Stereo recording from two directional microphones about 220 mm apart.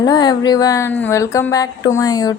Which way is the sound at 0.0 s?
20° left (ahead or behind).